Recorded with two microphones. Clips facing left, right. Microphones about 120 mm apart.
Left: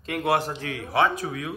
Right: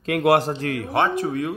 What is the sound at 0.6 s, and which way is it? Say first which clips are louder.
Speech: right 2 dB; 50° right (ahead or behind).